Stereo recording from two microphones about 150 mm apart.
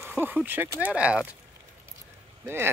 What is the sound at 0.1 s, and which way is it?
Speech, 10° right (ahead or behind).